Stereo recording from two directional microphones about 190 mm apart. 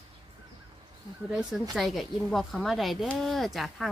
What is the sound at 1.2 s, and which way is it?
A woman's voice, 5° right (ahead or behind).